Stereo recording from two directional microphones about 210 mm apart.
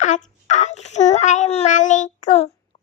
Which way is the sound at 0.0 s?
35° left (ahead or behind).